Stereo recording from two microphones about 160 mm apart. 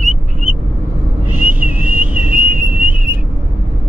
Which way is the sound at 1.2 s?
10° right (ahead or behind).